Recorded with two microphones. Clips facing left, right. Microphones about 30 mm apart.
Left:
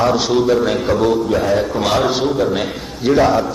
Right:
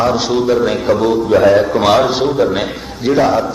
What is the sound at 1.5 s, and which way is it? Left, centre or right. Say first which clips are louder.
A man's voice: right 5 dB; centre.